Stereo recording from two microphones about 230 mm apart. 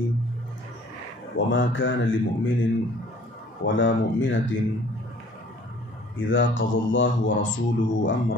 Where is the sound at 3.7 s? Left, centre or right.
Left.